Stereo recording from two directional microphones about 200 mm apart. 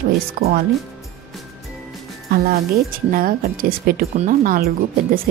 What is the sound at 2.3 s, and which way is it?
A woman's voice, 50° right (ahead or behind).